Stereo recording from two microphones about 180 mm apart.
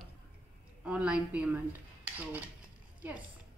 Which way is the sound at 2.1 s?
10° right (ahead or behind).